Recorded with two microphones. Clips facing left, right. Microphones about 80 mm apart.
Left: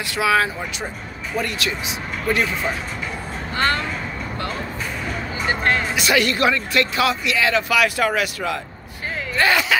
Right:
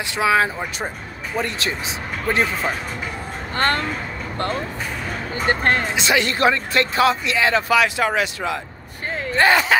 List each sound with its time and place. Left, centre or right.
0.1 s speech: right
3.5 s speech: right
5.3 s speech: right
5.9 s speech: right
9.3 s a sound: right